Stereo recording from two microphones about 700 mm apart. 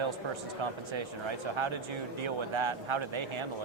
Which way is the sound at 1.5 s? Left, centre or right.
Right.